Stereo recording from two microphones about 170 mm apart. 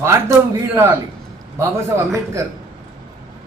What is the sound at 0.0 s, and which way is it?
Speech, 15° right (ahead or behind).